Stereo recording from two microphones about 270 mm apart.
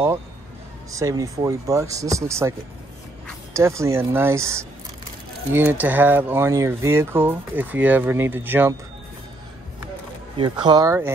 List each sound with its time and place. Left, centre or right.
0.9 s speech: centre
3.5 s speech: centre
10.3 s speech: centre